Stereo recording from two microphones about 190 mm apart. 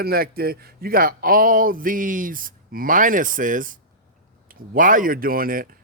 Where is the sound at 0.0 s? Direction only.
55° right (ahead or behind).